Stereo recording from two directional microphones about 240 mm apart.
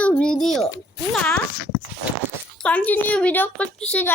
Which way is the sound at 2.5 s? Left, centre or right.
Centre.